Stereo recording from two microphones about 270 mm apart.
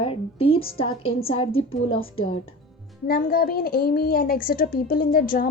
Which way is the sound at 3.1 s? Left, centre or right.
Left.